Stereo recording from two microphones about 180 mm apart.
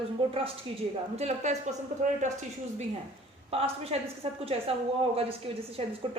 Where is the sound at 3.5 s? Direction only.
35° right (ahead or behind).